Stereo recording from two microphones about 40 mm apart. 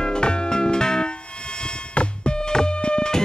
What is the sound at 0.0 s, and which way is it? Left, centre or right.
Music, left.